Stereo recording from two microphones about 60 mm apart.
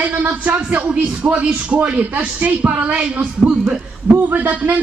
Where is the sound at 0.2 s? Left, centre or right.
Right.